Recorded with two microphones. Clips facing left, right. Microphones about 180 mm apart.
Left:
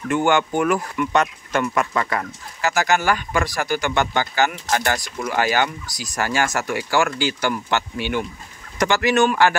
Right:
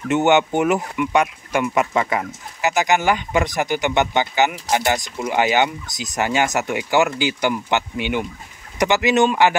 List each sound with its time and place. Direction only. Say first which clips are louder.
0.1 s speech: right 3 dB; 20° right (ahead or behind)
1.7 s speech: right 3 dB; 20° right (ahead or behind)